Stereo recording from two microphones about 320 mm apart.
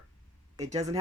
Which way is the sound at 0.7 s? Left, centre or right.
Centre.